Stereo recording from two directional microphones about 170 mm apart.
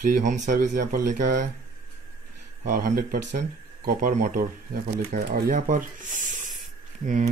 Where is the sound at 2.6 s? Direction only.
50° right (ahead or behind).